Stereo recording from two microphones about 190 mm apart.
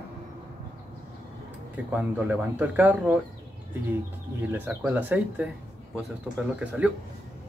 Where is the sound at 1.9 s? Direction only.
10° right (ahead or behind).